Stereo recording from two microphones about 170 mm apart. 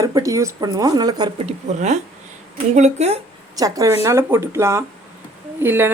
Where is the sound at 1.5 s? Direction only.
40° right (ahead or behind).